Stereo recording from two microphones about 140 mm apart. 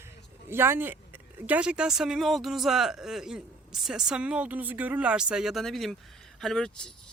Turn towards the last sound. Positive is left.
turn(degrees=5)  # may be behind; listen again after turning